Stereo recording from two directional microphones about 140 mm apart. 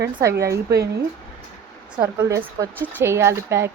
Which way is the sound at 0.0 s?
20° right (ahead or behind).